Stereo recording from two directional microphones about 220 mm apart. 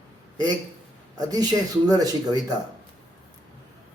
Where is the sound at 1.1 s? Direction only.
15° right (ahead or behind).